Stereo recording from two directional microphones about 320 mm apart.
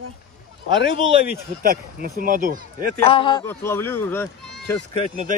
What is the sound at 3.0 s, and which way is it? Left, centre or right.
Speech, centre.